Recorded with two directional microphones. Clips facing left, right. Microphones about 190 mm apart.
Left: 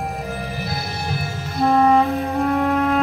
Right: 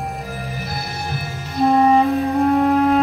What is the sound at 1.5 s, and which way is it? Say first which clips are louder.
Music: right 1 dB; 15° right (ahead or behind).